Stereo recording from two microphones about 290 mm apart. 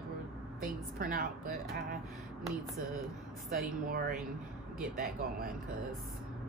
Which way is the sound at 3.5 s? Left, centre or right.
Right.